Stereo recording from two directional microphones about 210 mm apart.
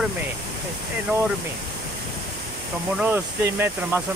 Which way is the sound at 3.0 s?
10° right (ahead or behind).